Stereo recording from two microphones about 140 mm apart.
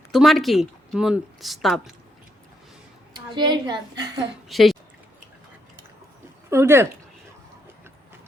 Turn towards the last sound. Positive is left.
turn(degrees=-20)  # may be behind; listen again after turning